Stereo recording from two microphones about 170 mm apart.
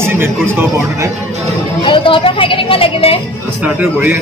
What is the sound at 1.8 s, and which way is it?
A woman's voice, 30° left (ahead or behind).